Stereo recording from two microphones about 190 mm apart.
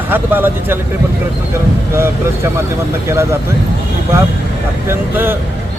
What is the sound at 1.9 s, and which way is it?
Speech, 15° right (ahead or behind).